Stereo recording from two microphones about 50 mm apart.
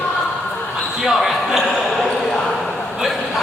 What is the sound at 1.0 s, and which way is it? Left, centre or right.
Basketball bounce, centre.